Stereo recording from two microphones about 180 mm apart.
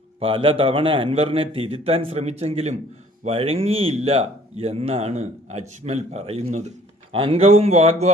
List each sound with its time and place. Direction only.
0.2 s speech: 30° right (ahead or behind)